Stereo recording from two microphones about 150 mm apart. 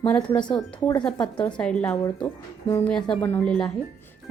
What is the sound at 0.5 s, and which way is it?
Speech, 30° left (ahead or behind).